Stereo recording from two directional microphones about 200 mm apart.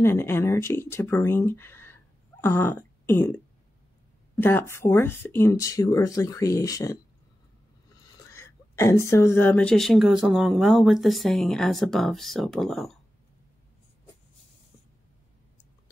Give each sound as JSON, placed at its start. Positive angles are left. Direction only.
{"t": 0.0, "sound": "speech", "side_deg": 10}
{"t": 2.4, "sound": "throat clearing", "side_deg": 10}
{"t": 4.4, "sound": "speech", "side_deg": 10}
{"t": 8.3, "sound": "a woman's voice", "side_deg": 15}